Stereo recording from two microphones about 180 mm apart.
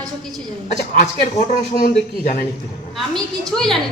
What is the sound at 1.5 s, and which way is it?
Speech, 55° left (ahead or behind).